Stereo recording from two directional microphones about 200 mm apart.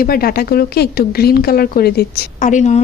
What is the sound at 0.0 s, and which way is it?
A woman's voice, 50° left (ahead or behind).